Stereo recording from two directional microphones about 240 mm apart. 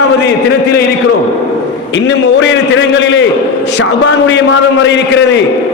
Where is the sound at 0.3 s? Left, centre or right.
Left.